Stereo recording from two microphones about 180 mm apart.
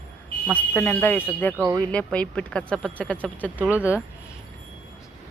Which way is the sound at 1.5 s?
20° right (ahead or behind).